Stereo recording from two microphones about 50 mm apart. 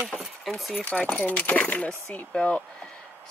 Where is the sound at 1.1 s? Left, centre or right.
Left.